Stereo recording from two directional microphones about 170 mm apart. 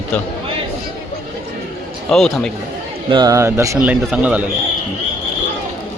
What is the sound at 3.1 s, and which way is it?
Speech, 25° right (ahead or behind).